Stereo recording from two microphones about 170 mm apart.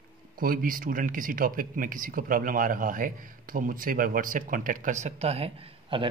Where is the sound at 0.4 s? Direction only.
55° right (ahead or behind).